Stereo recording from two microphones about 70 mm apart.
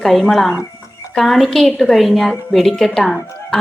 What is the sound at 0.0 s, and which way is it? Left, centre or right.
A woman's voice, centre.